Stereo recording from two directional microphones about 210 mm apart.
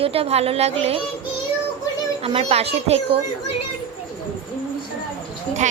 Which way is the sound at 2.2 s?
30° right (ahead or behind).